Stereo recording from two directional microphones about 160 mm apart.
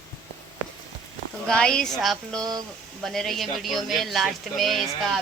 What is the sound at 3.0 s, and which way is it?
Speech, centre (ahead or behind).